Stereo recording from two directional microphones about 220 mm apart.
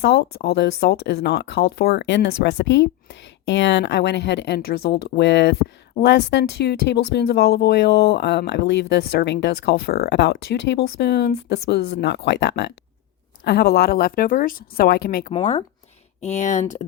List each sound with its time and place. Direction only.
0.0 s speech: 45° left (ahead or behind)
15.3 s speech: 25° left (ahead or behind)